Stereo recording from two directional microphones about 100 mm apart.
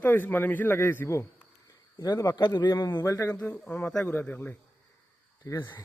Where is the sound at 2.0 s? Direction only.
35° left (ahead or behind).